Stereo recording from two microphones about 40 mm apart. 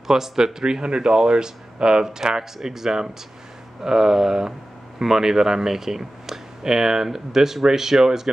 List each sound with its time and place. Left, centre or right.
0.1 s speech: centre